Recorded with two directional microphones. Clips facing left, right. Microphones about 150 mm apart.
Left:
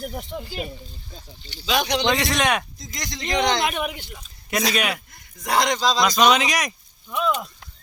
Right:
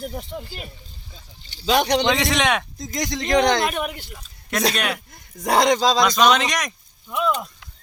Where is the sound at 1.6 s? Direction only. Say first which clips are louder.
Right 4 dB; 45° right (ahead or behind).